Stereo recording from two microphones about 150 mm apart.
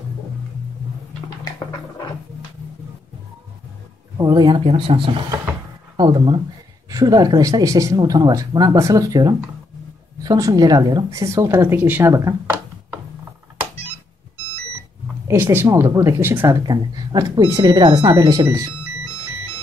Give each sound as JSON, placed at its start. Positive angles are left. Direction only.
{"t": 1.4, "sound": "a sound", "side_deg": 25}
{"t": 4.2, "sound": "speech", "side_deg": -25}
{"t": 15.2, "sound": "speech", "side_deg": -15}
{"t": 16.6, "sound": "speech", "side_deg": -25}